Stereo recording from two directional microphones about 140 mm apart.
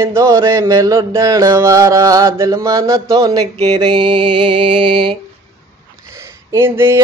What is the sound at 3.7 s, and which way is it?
Mantra, 35° right (ahead or behind).